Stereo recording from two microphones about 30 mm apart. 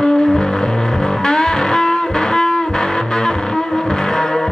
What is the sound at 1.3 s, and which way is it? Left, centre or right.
Music, left.